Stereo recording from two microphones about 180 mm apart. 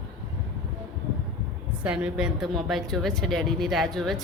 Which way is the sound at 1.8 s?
5° right (ahead or behind).